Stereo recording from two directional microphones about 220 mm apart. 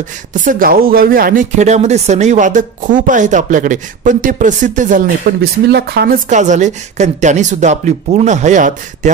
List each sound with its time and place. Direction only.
0.3 s speech: 40° right (ahead or behind)